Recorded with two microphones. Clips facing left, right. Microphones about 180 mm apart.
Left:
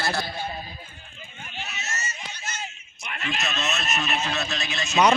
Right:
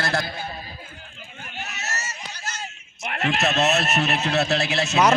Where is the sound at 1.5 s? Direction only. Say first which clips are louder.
Right 2 dB; 70° right (ahead or behind).